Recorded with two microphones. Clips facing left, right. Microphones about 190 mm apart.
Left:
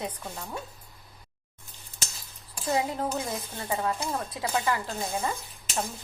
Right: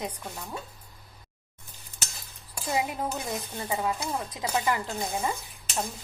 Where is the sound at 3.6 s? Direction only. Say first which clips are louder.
Left 1 dB; 15° right (ahead or behind).